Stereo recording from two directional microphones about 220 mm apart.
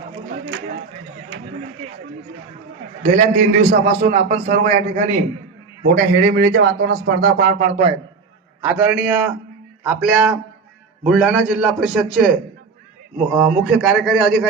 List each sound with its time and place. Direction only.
0.3 s a sound: 45° right (ahead or behind)
3.0 s a man's voice: 35° right (ahead or behind)
5.9 s a man's voice: 45° right (ahead or behind)
8.6 s a man's voice: 10° right (ahead or behind)